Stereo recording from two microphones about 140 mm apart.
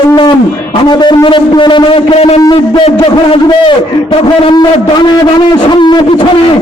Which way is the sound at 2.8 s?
40° left (ahead or behind).